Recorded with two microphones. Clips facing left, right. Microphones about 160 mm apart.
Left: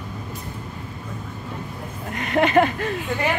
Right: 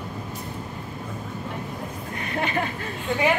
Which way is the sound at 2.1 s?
85° left.